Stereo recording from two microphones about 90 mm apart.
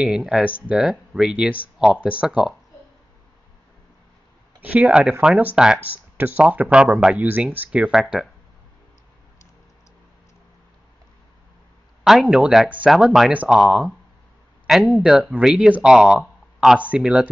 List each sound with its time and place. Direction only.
0.0 s speech: 5° right (ahead or behind)
4.6 s speech: 15° right (ahead or behind)
12.0 s speech: 5° right (ahead or behind)